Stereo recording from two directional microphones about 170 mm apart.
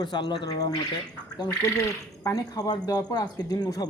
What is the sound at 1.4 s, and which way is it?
Speech, 20° left (ahead or behind).